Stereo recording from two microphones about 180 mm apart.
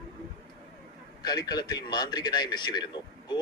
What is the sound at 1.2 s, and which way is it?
A man's voice, 20° left (ahead or behind).